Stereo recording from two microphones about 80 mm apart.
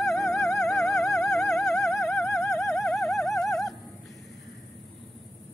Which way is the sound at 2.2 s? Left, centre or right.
Left.